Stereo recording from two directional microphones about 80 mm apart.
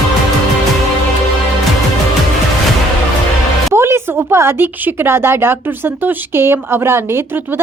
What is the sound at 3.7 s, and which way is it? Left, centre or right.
A child's voice, right.